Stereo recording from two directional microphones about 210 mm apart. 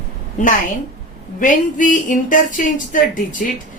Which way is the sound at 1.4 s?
40° left (ahead or behind).